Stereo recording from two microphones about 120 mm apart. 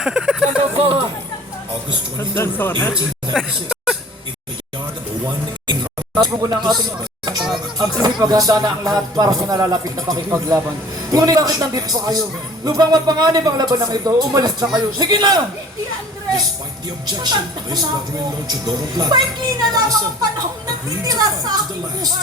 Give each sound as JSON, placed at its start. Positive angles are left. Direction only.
{"t": 0.0, "sound": "speech", "side_deg": -5}
{"t": 0.8, "sound": "speech", "side_deg": -55}
{"t": 2.1, "sound": "speech", "side_deg": 20}
{"t": 3.3, "sound": "speech", "side_deg": 0}
{"t": 6.1, "sound": "music", "side_deg": -30}
{"t": 17.1, "sound": "music", "side_deg": -35}
{"t": 21.0, "sound": "music", "side_deg": -30}